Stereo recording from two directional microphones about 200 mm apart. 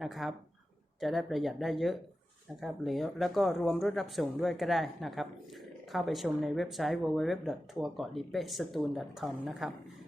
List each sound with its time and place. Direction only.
0.0 s speech: centre (ahead or behind)